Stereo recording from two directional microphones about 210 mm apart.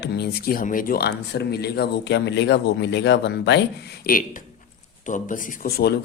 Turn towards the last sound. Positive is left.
turn(degrees=50)  # may be behind; listen again after turning